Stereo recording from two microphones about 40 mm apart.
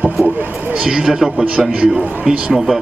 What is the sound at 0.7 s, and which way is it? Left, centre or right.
Speech, right.